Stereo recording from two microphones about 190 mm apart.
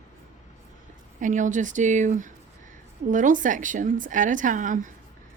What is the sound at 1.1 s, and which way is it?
Speech, 40° right (ahead or behind).